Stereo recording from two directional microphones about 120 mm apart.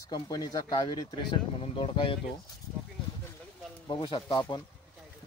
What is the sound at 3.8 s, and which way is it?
Speech, 40° left (ahead or behind).